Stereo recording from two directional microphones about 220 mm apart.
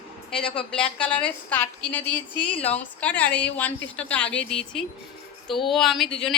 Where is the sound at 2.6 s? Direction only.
5° left (ahead or behind).